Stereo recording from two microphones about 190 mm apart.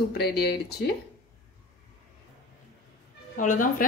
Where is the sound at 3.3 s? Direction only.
45° left (ahead or behind).